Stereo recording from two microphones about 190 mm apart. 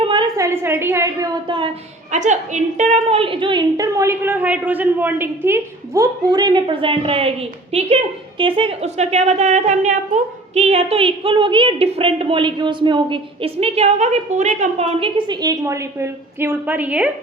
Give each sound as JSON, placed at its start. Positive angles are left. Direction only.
{"t": 0.0, "sound": "a woman's voice", "side_deg": -25}
{"t": 2.1, "sound": "a woman's voice", "side_deg": -40}